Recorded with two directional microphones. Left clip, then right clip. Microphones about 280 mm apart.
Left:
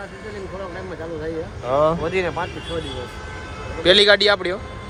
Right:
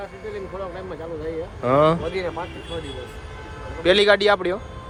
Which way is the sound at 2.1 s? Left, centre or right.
Left.